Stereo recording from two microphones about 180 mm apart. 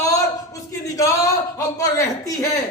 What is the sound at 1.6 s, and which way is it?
Speech, 20° left (ahead or behind).